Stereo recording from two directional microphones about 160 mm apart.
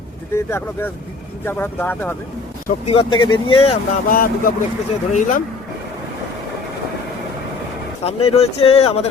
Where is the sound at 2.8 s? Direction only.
35° left (ahead or behind).